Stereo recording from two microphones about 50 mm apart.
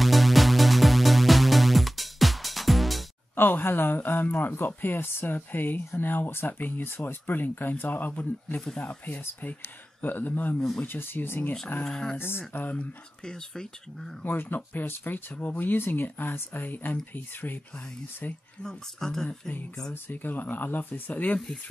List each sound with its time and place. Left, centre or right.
0.0 s music: centre
3.3 s speech: left
11.8 s speech: centre
12.2 s speech: left
13.2 s speech: centre
14.2 s speech: left
18.6 s speech: centre
20.1 s speech: left